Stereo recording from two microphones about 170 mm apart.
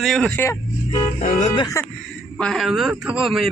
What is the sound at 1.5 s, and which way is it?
Speech, 25° left (ahead or behind).